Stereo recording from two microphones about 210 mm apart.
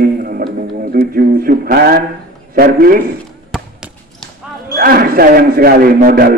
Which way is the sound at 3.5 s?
Centre (ahead or behind).